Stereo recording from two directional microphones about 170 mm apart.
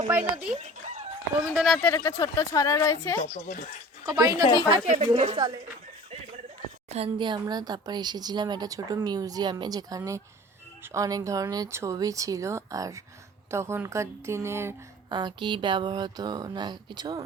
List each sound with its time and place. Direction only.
0.1 s a woman's voice: 10° right (ahead or behind)
0.5 s chicken: 40° right (ahead or behind)
1.5 s speech: centre (ahead or behind); by 3.2 s 15° left (ahead or behind)
3.2 s speech: 50° left (ahead or behind)
4.0 s speech: 20° right (ahead or behind)
4.4 s speech: 25° left (ahead or behind)
5.0 s speech: 40° right (ahead or behind)
6.8 s a woman's voice: 35° right (ahead or behind); by 14.8 s 15° right (ahead or behind)
15.1 s speech: 25° right (ahead or behind)